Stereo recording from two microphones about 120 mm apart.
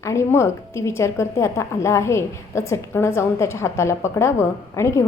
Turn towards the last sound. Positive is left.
turn(degrees=25)  # may be behind; listen again after turning